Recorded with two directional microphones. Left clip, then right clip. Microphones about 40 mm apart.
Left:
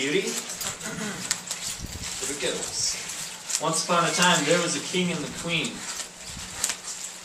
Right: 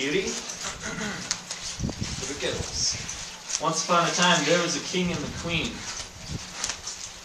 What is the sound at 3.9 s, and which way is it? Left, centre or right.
Speech, centre.